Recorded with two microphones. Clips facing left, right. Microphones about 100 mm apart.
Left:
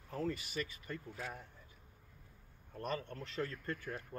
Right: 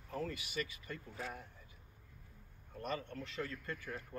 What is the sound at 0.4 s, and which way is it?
Speech, 40° left (ahead or behind).